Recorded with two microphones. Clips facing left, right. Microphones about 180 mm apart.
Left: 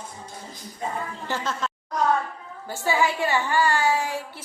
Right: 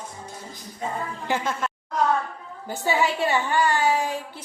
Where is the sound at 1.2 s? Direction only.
15° right (ahead or behind).